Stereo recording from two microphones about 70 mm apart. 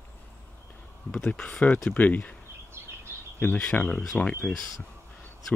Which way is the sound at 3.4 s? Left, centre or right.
Centre.